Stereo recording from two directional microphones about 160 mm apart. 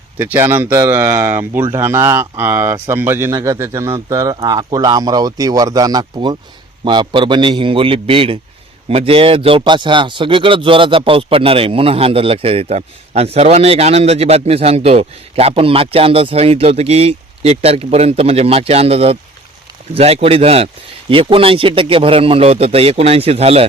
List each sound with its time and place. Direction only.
0.2 s a man's voice: 15° right (ahead or behind); by 23.6 s 40° right (ahead or behind)